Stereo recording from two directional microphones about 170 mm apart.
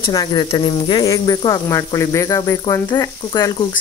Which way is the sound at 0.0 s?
25° left (ahead or behind).